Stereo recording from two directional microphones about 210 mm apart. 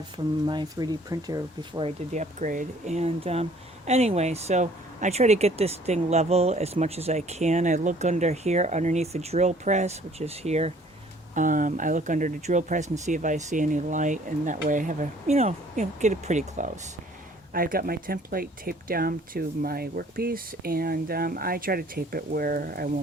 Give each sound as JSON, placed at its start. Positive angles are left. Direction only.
{"t": 0.4, "sound": "speech", "side_deg": -20}
{"t": 2.1, "sound": "speech", "side_deg": -40}